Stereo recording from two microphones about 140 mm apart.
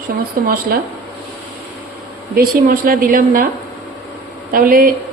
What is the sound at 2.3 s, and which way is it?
A woman's voice, 90° right.